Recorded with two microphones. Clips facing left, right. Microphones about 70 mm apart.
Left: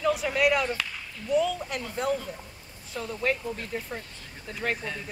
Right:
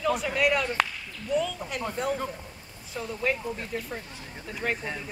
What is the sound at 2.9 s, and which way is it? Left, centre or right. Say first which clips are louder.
Speech: even; centre.